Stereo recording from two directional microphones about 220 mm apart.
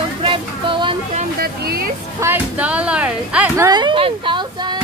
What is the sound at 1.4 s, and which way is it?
Speech, 45° right (ahead or behind).